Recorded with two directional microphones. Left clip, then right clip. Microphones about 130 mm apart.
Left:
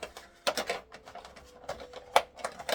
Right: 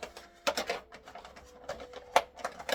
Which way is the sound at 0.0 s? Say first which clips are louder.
Left 1 dB; 10° left (ahead or behind).